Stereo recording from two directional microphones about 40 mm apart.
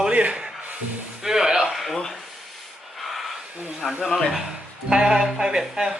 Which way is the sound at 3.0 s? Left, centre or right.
Centre.